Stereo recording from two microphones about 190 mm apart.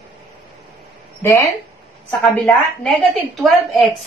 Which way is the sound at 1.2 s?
15° left (ahead or behind).